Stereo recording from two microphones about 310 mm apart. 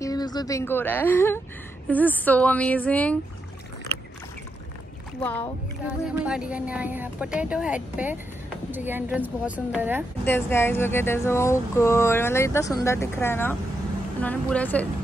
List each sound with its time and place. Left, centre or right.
0.0 s speech: centre
5.2 s speech: centre
10.2 s speech: centre